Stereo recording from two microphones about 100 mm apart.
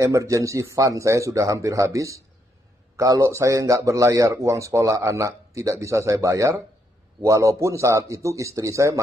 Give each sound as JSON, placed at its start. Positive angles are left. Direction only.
{"t": 0.0, "sound": "a man's voice", "side_deg": -30}